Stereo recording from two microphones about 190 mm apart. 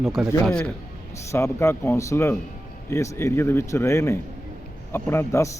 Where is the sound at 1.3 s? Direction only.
15° left (ahead or behind).